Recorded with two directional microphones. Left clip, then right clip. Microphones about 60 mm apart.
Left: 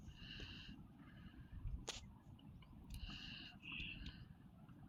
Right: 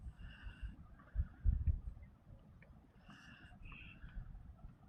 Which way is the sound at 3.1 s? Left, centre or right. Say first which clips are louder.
Left 6 dB; centre.